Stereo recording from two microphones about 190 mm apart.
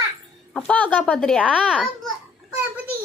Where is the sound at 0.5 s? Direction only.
5° left (ahead or behind).